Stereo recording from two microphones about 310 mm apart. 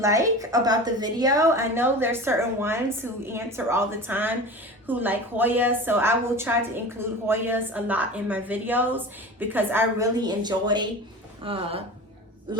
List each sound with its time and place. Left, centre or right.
0.0 s a woman's voice: centre